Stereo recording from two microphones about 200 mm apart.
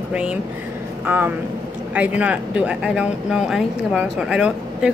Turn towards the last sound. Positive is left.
turn(degrees=-5)  # may be behind; listen again after turning